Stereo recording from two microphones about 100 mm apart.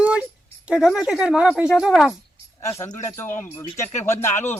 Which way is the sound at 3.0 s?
25° left (ahead or behind).